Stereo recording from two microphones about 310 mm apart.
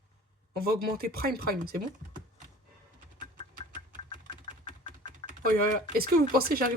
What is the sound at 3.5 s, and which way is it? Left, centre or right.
Engine, right.